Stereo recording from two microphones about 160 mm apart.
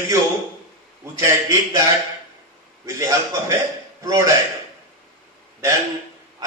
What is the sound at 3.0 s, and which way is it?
A man's voice, 20° right (ahead or behind).